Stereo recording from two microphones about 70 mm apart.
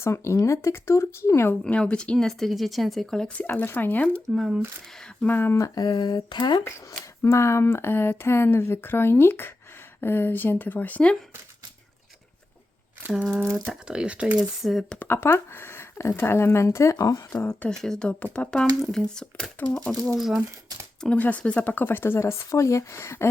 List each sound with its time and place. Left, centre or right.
0.0 s speech: left
1.6 s speech: centre
3.2 s speech: left
4.4 s speech: centre
5.2 s speech: left
5.5 s a sound: left
7.2 s speech: left; by 11.2 s centre
13.5 s speech: centre
14.5 s speech: centre
14.9 s speech: left
17.5 s speech: centre
20.1 s speech: centre
21.0 s speech: centre; by 23.3 s left